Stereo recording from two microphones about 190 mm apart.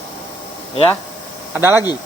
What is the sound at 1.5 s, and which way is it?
Speech, 15° right (ahead or behind).